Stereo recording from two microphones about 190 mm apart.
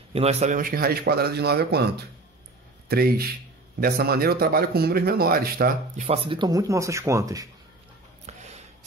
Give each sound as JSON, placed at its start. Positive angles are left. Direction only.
{"t": 0.1, "sound": "a man's voice", "side_deg": -35}
{"t": 2.9, "sound": "speech", "side_deg": -55}
{"t": 6.0, "sound": "speech", "side_deg": -30}
{"t": 8.3, "sound": "a sound", "side_deg": -35}